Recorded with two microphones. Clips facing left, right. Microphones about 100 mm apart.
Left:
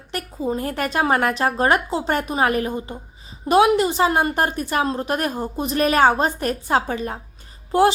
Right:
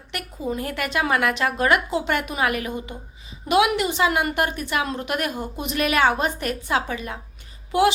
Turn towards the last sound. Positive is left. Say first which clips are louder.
# left 3 dB
turn(degrees=35)  # may be behind; listen again after turning